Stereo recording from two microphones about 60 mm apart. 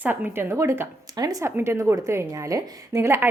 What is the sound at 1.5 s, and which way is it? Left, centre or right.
Speech, right.